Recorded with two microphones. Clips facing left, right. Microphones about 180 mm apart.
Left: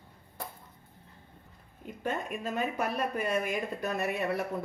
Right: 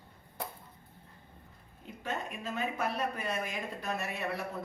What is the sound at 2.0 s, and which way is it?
Speech, 50° left (ahead or behind).